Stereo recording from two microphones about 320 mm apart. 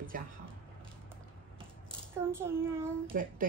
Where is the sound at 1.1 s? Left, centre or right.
Centre.